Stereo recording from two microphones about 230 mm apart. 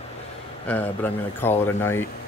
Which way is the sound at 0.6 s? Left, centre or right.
Centre.